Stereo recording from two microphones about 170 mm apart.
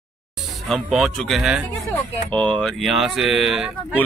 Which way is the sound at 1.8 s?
10° left (ahead or behind).